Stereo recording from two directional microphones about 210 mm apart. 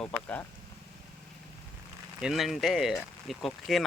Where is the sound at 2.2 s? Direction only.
Centre (ahead or behind).